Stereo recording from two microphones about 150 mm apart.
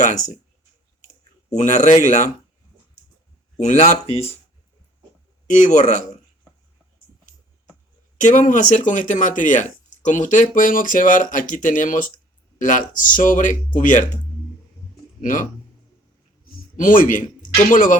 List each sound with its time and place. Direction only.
0.0 s speech: 50° left (ahead or behind)
1.0 s clicking: 55° left (ahead or behind)
3.6 s speech: 50° left (ahead or behind)
5.5 s speech: 55° left (ahead or behind)
8.2 s speech: 55° left (ahead or behind)
15.2 s speech: 60° left (ahead or behind)
16.5 s a sound: 60° left (ahead or behind)
17.7 s speech: 60° left (ahead or behind)